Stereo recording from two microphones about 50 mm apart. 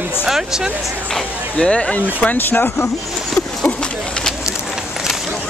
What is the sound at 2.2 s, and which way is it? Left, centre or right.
Speech, left.